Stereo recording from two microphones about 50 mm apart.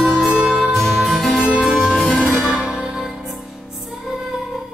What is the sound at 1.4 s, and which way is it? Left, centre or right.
Music, centre.